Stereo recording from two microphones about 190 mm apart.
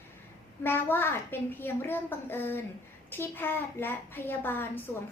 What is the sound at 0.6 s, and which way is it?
A woman's voice, 10° left (ahead or behind).